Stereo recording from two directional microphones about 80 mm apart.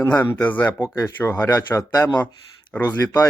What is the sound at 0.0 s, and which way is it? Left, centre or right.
Speech, left.